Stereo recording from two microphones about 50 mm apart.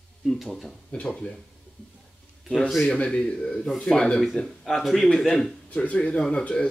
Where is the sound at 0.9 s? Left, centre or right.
Centre.